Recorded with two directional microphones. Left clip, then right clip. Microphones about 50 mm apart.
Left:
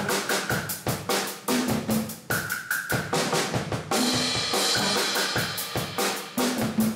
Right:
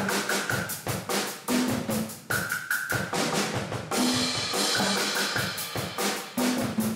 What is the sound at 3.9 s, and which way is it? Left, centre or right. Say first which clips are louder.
Drum kit: left 2 dB; centre.